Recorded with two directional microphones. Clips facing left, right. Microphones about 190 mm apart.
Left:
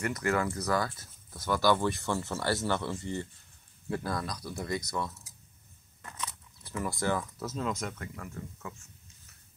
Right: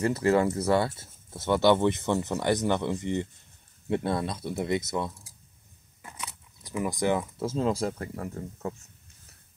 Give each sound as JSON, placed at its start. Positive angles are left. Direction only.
{"t": 0.0, "sound": "speech", "side_deg": -30}